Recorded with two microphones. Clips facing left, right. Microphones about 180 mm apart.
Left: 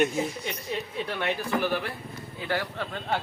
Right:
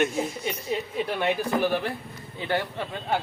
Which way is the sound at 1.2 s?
15° right (ahead or behind).